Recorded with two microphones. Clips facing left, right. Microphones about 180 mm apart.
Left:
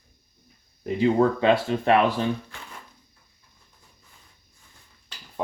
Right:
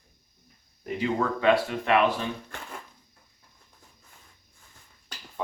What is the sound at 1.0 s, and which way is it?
Speech, 30° left (ahead or behind).